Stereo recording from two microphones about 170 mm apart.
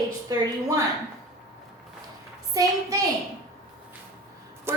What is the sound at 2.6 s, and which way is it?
Speech, 20° right (ahead or behind).